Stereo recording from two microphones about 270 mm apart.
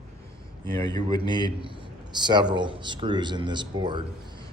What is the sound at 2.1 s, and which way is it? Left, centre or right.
A man's voice, centre.